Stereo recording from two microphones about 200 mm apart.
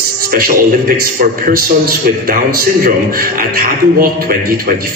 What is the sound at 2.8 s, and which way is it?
A man's voice, 45° right (ahead or behind).